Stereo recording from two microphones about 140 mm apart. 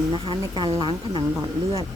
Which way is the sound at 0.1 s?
35° right (ahead or behind).